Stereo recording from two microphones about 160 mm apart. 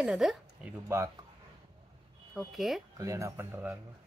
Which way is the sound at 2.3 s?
Centre (ahead or behind).